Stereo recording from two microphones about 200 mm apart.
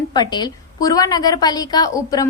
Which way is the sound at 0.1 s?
20° left (ahead or behind).